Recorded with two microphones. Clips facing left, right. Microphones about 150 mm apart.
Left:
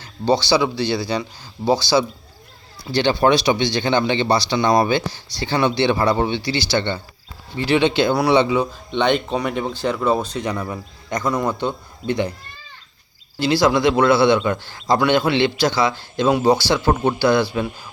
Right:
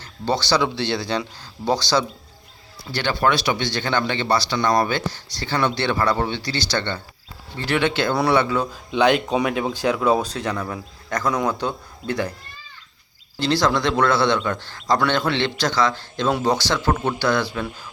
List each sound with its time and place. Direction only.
0.0 s a man's voice: 10° left (ahead or behind)
2.9 s a man's voice: 20° left (ahead or behind)
8.9 s a man's voice: 5° right (ahead or behind); by 11.3 s 10° left (ahead or behind)
13.4 s a man's voice: 10° left (ahead or behind)